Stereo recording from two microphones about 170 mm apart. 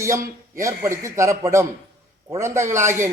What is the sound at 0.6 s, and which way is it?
A man's voice, 15° right (ahead or behind).